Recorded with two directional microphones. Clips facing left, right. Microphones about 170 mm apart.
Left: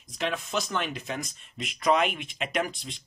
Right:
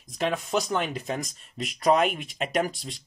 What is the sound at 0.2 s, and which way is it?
Speech, 40° right (ahead or behind).